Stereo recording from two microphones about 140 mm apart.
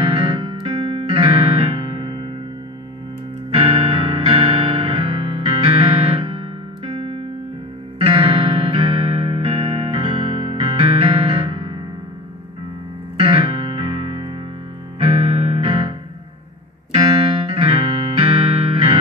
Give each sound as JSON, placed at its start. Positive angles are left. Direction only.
{"t": 0.0, "sound": "music", "side_deg": -40}
{"t": 3.9, "sound": "music", "side_deg": -45}
{"t": 13.2, "sound": "music", "side_deg": -40}
{"t": 17.6, "sound": "music", "side_deg": -45}